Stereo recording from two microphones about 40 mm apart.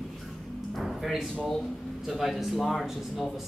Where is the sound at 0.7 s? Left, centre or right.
Centre.